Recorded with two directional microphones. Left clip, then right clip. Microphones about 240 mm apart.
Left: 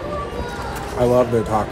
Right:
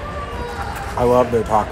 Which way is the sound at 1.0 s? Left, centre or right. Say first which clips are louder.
Right 1 dB; centre.